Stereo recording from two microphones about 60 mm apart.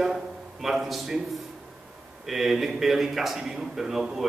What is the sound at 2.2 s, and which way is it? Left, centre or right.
A man's voice, centre.